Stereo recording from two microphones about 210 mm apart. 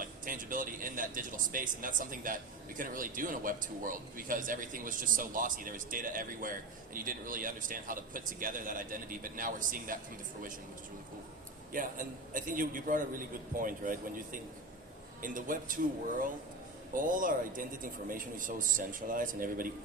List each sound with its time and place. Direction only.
0.0 s a man's voice: 40° right (ahead or behind)
11.7 s a man's voice: 40° right (ahead or behind)
16.9 s a man's voice: 40° right (ahead or behind)